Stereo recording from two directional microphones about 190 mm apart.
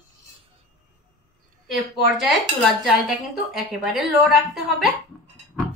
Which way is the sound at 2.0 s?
Centre (ahead or behind).